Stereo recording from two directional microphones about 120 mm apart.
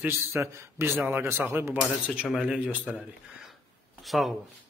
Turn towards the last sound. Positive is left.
turn(degrees=0)  # may be behind; listen again after turning